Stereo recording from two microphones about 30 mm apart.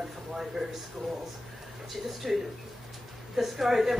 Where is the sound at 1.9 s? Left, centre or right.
Centre.